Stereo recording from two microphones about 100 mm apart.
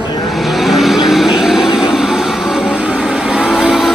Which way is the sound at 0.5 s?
Centre (ahead or behind).